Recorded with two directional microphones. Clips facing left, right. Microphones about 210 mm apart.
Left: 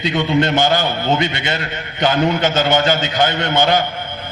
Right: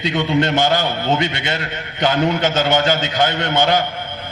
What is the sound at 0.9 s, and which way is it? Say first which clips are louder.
Speech: left 1 dB; 45° left (ahead or behind).